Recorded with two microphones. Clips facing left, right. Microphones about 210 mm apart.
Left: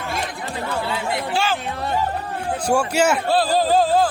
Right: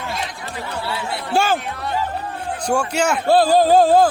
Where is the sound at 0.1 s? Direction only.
55° left (ahead or behind).